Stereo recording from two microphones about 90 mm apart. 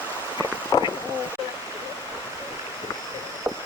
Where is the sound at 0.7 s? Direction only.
45° left (ahead or behind).